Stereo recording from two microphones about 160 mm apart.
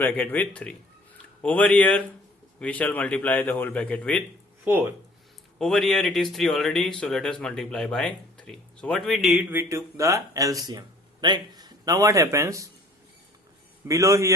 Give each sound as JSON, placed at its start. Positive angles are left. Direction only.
{"t": 0.0, "sound": "a man's voice", "side_deg": 10}
{"t": 4.6, "sound": "speech", "side_deg": -15}
{"t": 5.5, "sound": "speech", "side_deg": 5}
{"t": 9.5, "sound": "speech", "side_deg": -15}
{"t": 13.8, "sound": "speech", "side_deg": -20}